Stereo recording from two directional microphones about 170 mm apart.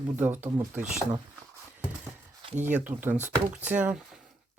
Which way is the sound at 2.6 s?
10° right (ahead or behind).